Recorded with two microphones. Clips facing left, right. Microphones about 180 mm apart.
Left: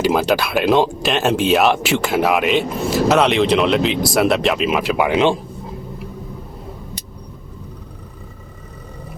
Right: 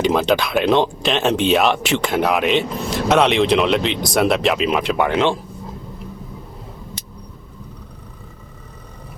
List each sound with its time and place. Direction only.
0.0 s speech: 5° left (ahead or behind)
5.1 s speech: 15° left (ahead or behind)